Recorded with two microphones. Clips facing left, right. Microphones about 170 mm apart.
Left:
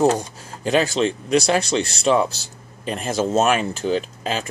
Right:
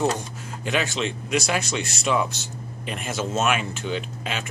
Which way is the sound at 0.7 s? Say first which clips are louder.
Left 7 dB; 35° left (ahead or behind).